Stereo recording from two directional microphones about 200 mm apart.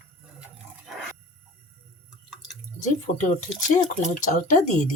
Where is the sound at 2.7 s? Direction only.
40° left (ahead or behind).